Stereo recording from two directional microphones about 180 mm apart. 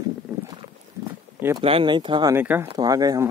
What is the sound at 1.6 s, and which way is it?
Speech, 30° right (ahead or behind).